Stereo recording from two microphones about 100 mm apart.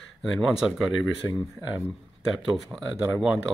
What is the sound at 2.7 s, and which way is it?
Speech, centre (ahead or behind).